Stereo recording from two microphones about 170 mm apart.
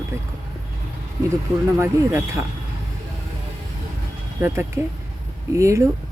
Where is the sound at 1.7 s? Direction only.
15° right (ahead or behind).